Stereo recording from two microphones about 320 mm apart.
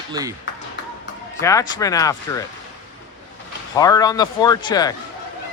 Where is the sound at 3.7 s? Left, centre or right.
Centre.